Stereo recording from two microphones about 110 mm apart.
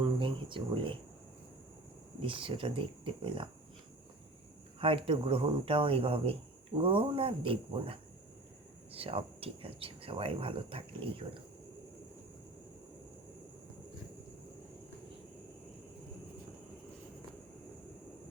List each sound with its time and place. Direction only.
0.0 s a sound: 50° right (ahead or behind)
2.2 s speech: 50° right (ahead or behind)
4.8 s speech: 55° right (ahead or behind)